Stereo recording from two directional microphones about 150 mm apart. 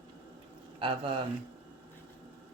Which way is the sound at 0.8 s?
35° right (ahead or behind).